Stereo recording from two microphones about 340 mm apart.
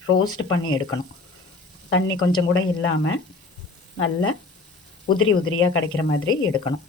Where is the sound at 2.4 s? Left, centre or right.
Left.